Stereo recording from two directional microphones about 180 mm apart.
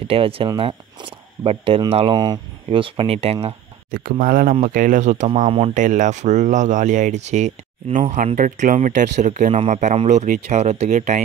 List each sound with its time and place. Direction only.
0.0 s speech: 30° right (ahead or behind)
3.9 s speech: 50° right (ahead or behind)